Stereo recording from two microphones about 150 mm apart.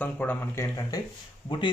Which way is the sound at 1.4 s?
35° left (ahead or behind).